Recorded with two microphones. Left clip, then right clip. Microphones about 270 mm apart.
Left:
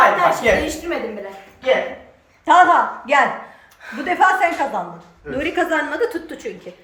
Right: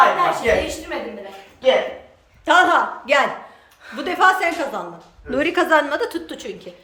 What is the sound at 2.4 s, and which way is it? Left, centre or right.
A woman's voice, centre.